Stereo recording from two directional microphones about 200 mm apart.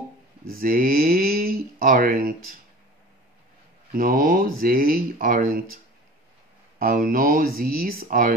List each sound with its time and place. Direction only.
0.5 s speech: 45° right (ahead or behind)
3.9 s speech: 45° right (ahead or behind)
6.8 s speech: 45° right (ahead or behind)